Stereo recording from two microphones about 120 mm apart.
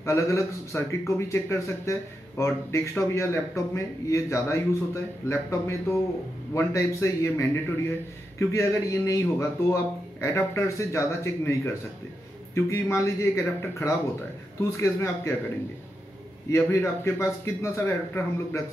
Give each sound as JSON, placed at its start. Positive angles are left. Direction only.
{"t": 0.0, "sound": "a man's voice", "side_deg": 25}
{"t": 16.4, "sound": "a man's voice", "side_deg": 25}